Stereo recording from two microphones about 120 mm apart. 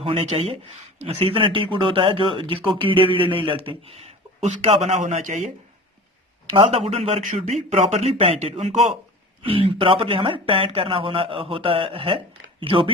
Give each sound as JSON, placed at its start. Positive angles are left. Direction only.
{"t": 0.0, "sound": "speech", "side_deg": -55}
{"t": 5.0, "sound": "a man's voice", "side_deg": -90}
{"t": 6.5, "sound": "speech", "side_deg": -55}